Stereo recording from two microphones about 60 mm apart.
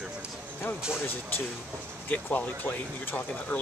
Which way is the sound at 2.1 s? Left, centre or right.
Left.